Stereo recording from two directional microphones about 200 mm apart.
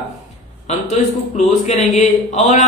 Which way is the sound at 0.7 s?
35° left (ahead or behind).